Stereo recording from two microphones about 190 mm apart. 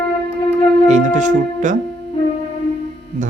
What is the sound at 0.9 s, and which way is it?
Speech, 40° right (ahead or behind).